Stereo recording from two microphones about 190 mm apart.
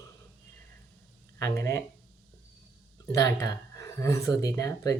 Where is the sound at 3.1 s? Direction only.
15° left (ahead or behind).